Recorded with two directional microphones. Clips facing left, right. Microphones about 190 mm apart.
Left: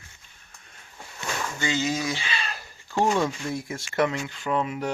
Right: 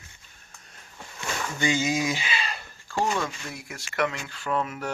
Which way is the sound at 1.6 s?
15° right (ahead or behind).